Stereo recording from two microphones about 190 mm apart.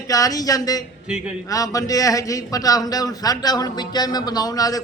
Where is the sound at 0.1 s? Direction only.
20° left (ahead or behind).